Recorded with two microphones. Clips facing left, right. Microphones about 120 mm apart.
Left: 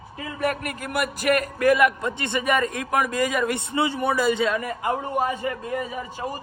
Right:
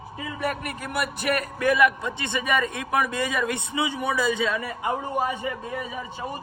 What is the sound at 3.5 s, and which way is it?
Speech, 15° right (ahead or behind).